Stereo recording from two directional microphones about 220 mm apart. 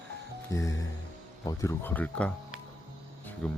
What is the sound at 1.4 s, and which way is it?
Speech, 15° left (ahead or behind).